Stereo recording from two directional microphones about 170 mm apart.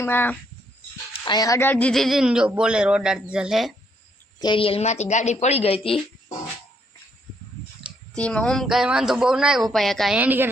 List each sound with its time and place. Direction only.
0.0 s speech: 10° left (ahead or behind)
1.2 s a man's voice: 25° left (ahead or behind); by 3.8 s centre (ahead or behind)
4.4 s speech: 30° left (ahead or behind)
8.1 s a man's voice: 5° left (ahead or behind)
10.2 s a woman's voice: 10° right (ahead or behind)